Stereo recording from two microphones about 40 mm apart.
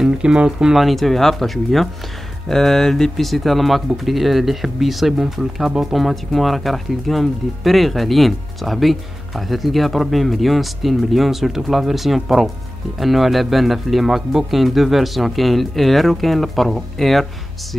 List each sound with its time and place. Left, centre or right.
0.0 s speech: right
0.7 s speech: centre